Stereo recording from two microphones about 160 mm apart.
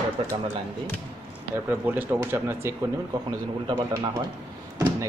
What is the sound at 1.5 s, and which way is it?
Speech, 10° right (ahead or behind).